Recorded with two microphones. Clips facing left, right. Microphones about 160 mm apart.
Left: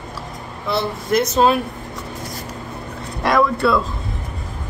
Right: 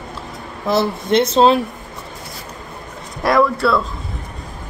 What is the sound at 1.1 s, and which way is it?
Speech, 25° right (ahead or behind).